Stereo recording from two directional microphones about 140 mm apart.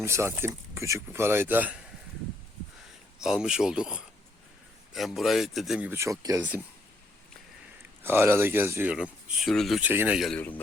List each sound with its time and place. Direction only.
0.0 s speech: 20° right (ahead or behind)
3.2 s speech: 5° right (ahead or behind)
5.9 s speech: 20° right (ahead or behind)
8.0 s speech: 15° right (ahead or behind); by 9.8 s centre (ahead or behind)
9.8 s speech: 15° right (ahead or behind)
10.2 s speech: centre (ahead or behind)